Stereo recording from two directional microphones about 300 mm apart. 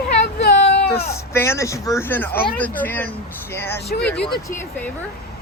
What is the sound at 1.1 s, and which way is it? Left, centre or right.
A woman's voice, centre.